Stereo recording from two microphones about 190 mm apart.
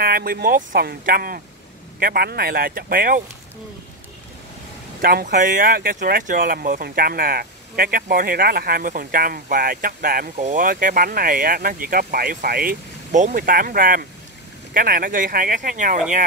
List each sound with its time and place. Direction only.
0.0 s speech: 50° right (ahead or behind)
5.0 s speech: 50° right (ahead or behind)